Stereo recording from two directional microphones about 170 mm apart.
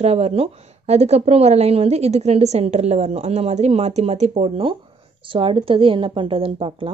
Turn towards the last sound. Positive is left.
turn(degrees=-30)  # may be behind; listen again after turning